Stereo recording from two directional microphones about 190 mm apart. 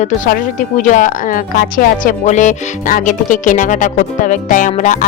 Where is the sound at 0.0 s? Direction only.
45° left (ahead or behind).